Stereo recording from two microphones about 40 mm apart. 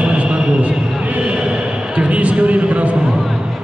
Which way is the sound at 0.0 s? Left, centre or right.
Right.